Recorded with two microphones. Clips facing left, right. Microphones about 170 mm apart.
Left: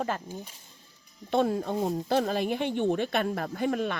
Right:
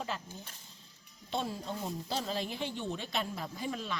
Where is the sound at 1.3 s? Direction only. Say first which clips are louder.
Left 11 dB; 60° left (ahead or behind).